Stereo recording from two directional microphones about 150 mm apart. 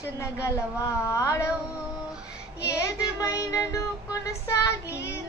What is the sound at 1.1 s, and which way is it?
Child singing, 20° left (ahead or behind).